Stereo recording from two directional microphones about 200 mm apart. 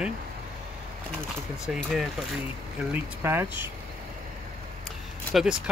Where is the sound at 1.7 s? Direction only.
Centre (ahead or behind).